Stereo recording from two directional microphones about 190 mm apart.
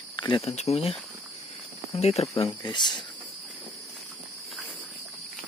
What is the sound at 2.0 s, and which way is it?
Speech, 35° left (ahead or behind).